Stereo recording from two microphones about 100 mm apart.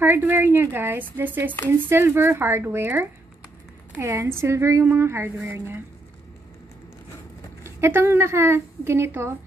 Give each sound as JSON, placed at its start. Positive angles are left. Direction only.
{"t": 0.0, "sound": "a woman's voice", "side_deg": -25}
{"t": 7.6, "sound": "a woman's voice", "side_deg": -25}